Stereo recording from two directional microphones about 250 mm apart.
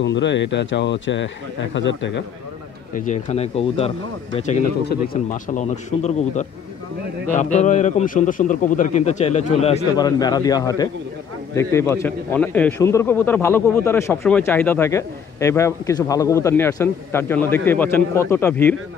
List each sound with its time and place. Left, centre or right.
0.0 s speech: left
2.9 s a man's voice: left
4.8 s a man's voice: left; by 18.8 s centre